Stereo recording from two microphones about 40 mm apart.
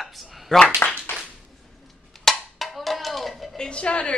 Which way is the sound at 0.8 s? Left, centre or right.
Left.